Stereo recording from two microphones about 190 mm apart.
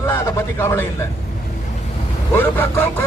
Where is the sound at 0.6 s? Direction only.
15° left (ahead or behind).